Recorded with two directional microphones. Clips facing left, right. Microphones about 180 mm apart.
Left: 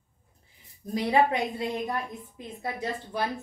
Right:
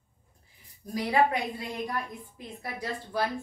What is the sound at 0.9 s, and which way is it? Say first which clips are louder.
Speech: left 2 dB; 25° left (ahead or behind).